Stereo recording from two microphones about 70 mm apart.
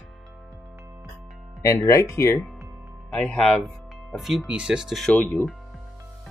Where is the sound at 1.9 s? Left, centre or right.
Left.